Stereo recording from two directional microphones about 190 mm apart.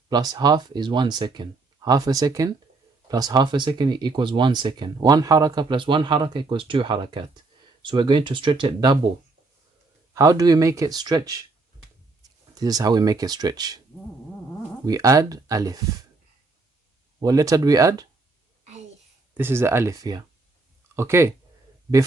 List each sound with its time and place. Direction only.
0.1 s speech: 20° right (ahead or behind)
10.2 s speech: 20° right (ahead or behind)
12.5 s speech: 20° right (ahead or behind)
14.8 s speech: 15° right (ahead or behind)
17.2 s speech: 20° right (ahead or behind)
18.6 s a sound: 35° right (ahead or behind)
19.3 s speech: 10° right (ahead or behind)